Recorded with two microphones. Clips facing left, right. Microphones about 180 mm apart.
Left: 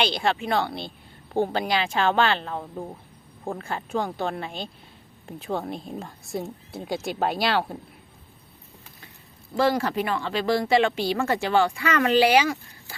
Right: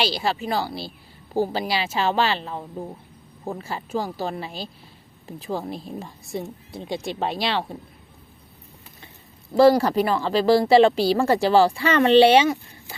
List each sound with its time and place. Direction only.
0.0 s a woman's voice: centre (ahead or behind)
9.6 s speech: 35° right (ahead or behind)